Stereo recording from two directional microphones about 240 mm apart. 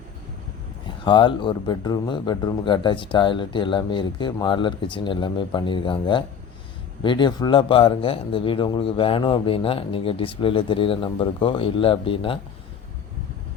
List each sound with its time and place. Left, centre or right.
1.0 s speech: centre